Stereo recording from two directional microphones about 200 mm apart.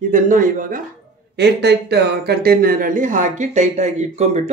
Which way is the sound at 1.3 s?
55° right (ahead or behind).